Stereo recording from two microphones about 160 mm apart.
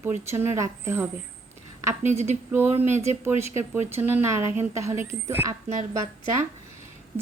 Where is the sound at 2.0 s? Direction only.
45° right (ahead or behind).